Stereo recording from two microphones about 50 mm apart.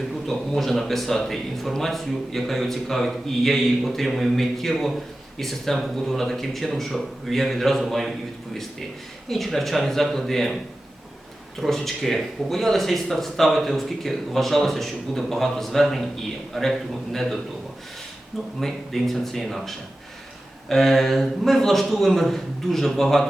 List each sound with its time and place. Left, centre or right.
0.3 s speech: centre
9.3 s speech: centre
11.6 s speech: centre
18.6 s speech: centre